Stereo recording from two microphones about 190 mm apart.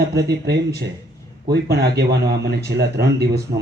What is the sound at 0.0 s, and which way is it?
A man's voice, 60° right (ahead or behind).